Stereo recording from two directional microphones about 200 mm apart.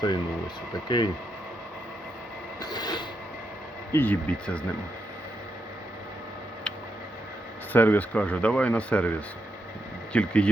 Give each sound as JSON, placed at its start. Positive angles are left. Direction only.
{"t": 0.0, "sound": "speech", "side_deg": 20}
{"t": 2.6, "sound": "train", "side_deg": 20}
{"t": 3.9, "sound": "speech", "side_deg": 10}
{"t": 7.7, "sound": "speech", "side_deg": 10}